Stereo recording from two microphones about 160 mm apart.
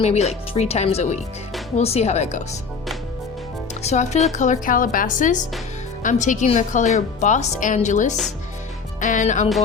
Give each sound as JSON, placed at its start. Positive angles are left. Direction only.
{"t": 0.0, "sound": "a woman's voice", "side_deg": 40}
{"t": 3.8, "sound": "a woman's voice", "side_deg": 45}